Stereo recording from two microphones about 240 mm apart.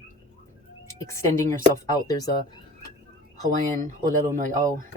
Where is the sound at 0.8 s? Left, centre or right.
Centre.